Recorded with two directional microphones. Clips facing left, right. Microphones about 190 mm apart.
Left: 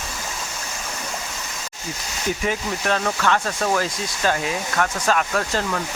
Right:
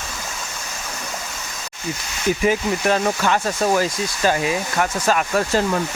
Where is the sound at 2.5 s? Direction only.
10° right (ahead or behind).